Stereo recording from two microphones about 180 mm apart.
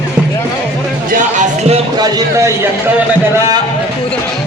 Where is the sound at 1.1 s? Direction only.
40° right (ahead or behind).